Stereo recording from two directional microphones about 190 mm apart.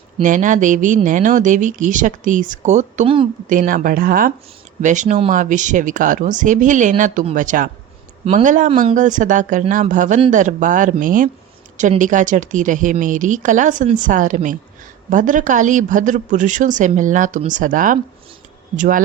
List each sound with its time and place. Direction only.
0.2 s speech: 40° right (ahead or behind)